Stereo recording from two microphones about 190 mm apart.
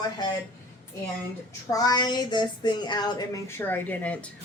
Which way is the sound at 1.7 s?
20° left (ahead or behind).